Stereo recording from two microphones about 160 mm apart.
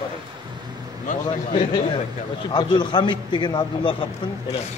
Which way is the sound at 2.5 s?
30° left (ahead or behind).